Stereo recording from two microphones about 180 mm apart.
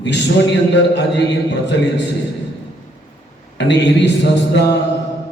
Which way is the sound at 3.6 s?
75° left (ahead or behind).